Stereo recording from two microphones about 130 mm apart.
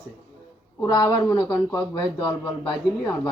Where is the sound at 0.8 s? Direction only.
30° left (ahead or behind).